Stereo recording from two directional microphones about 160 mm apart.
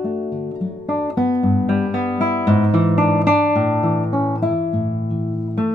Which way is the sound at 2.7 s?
Centre (ahead or behind).